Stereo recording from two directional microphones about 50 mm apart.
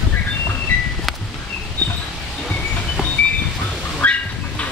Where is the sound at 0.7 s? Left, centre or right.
Left.